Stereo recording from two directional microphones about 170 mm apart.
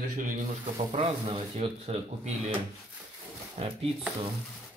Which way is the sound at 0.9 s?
30° right (ahead or behind).